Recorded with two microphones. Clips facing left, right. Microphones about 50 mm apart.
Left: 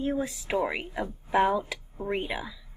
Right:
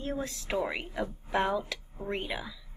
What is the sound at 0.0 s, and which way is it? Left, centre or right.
A woman's voice, centre.